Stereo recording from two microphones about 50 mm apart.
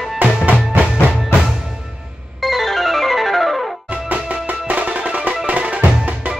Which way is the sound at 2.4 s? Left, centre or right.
Centre.